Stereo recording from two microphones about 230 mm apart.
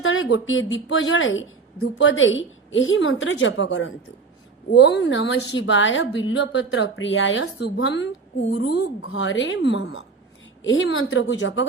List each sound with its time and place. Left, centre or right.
0.0 s a woman's voice: left